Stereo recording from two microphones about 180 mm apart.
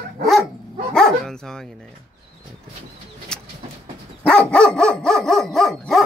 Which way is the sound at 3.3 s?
5° left (ahead or behind).